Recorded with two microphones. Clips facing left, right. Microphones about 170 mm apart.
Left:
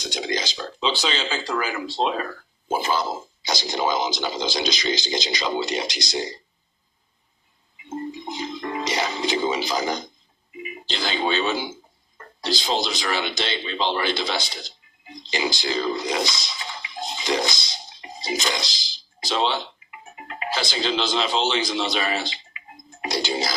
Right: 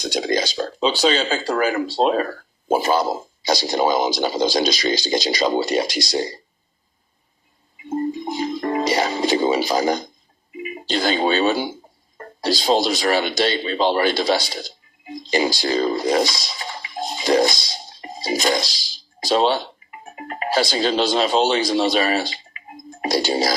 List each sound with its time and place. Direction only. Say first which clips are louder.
0.2 s speech: right 7 dB; 45° right (ahead or behind)
7.9 s music: right 7 dB; 45° right (ahead or behind)
10.8 s speech: right 6 dB; 45° right (ahead or behind)
17.8 s a sound: right 4 dB; 45° right (ahead or behind)
19.3 s speech: right 6 dB; 45° right (ahead or behind)